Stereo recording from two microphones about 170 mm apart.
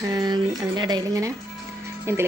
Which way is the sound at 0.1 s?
25° right (ahead or behind).